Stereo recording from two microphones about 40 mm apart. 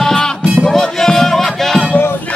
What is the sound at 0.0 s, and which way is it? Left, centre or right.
Music, centre.